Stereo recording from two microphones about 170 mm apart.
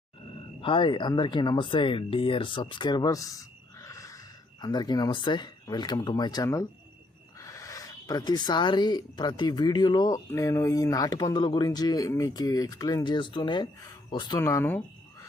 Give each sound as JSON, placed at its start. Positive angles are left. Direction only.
{"t": 0.6, "sound": "speech", "side_deg": 30}
{"t": 14.3, "sound": "speech", "side_deg": 15}